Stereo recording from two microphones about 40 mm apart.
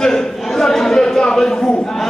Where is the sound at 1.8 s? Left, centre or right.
Centre.